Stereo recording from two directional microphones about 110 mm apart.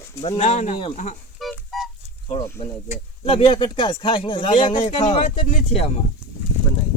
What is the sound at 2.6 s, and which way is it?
Speech, 55° left (ahead or behind).